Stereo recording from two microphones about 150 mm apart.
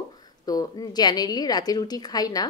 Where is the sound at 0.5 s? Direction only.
25° left (ahead or behind).